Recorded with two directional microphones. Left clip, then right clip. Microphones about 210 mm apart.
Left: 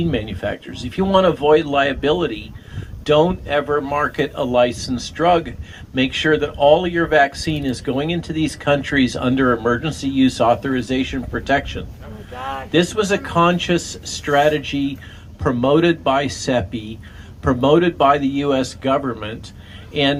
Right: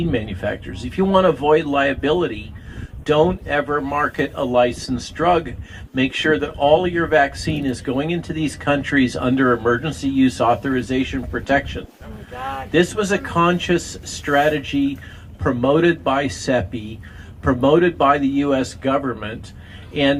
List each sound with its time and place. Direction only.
0.1 s speech: 55° left (ahead or behind)
12.4 s a sound: 55° right (ahead or behind)
12.7 s speech: 45° left (ahead or behind)